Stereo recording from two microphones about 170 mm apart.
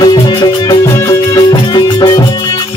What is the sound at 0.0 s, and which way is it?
Music, 25° left (ahead or behind).